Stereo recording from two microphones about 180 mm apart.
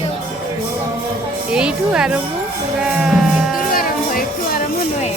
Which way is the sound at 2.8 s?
5° right (ahead or behind).